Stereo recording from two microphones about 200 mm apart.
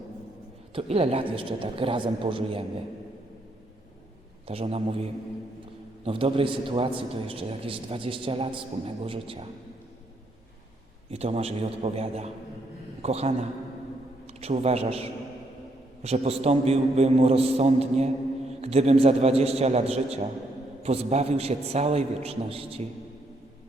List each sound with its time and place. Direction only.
0.7 s a man's voice: 30° right (ahead or behind)
4.4 s a man's voice: 30° right (ahead or behind)
6.1 s a man's voice: 25° right (ahead or behind)
11.1 s a man's voice: 30° right (ahead or behind)